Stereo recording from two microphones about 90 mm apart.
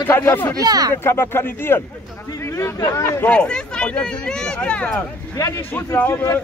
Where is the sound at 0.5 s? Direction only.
45° right (ahead or behind).